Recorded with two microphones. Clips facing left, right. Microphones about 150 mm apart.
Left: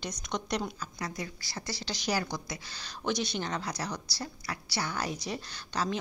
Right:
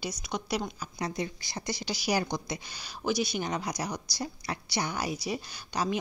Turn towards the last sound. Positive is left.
turn(degrees=-10)  # may be behind; listen again after turning